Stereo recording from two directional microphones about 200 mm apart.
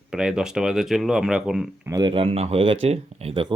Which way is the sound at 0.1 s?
5° right (ahead or behind).